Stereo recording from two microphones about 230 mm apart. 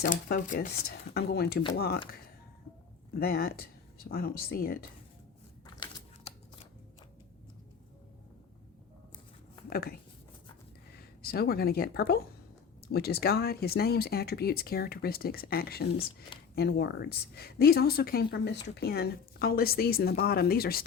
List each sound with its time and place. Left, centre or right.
0.0 s speech: left
3.2 s speech: left
5.8 s typing: left
9.6 s speech: left
10.9 s speech: left